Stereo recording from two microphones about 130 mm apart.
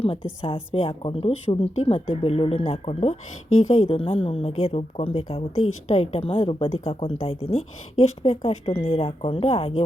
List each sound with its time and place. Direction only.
0.0 s a woman's voice: 45° left (ahead or behind)